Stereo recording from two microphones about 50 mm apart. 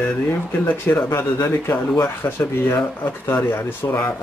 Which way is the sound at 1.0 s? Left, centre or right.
Left.